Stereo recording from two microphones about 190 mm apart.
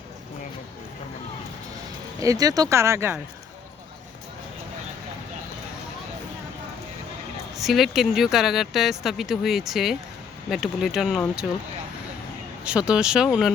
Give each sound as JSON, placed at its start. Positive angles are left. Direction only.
{"t": 2.2, "sound": "speech", "side_deg": -20}
{"t": 7.5, "sound": "speech", "side_deg": 0}
{"t": 12.6, "sound": "speech", "side_deg": -5}